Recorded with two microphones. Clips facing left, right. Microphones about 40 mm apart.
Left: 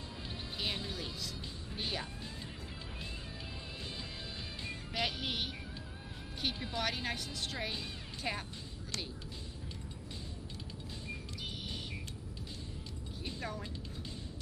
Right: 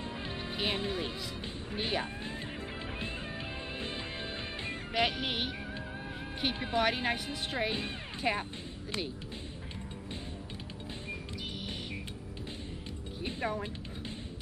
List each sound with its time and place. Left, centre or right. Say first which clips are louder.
0.3 s music: right 5 dB; right
1.7 s speech: right 6 dB; right
4.6 s music: right 6 dB; right
6.4 s speech: right 7 dB; right
13.2 s music: right 7 dB; right